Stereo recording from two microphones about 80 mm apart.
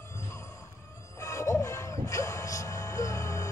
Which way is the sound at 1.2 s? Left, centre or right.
Left.